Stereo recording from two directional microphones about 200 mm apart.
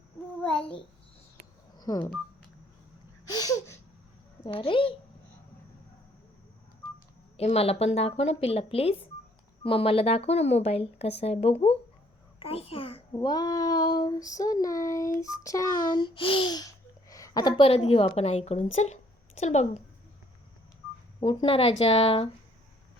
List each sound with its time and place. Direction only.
1.7 s telephone dialing: 20° left (ahead or behind)
3.2 s a sound: 20° left (ahead or behind)
4.4 s a child's voice: 25° left (ahead or behind)
7.3 s a child's voice: 30° left (ahead or behind)
21.2 s a child's voice: 25° left (ahead or behind)